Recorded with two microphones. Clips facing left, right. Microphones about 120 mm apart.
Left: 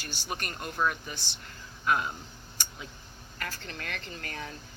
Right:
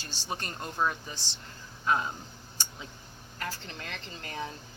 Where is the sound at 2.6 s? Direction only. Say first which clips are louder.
Even; 30° right (ahead or behind).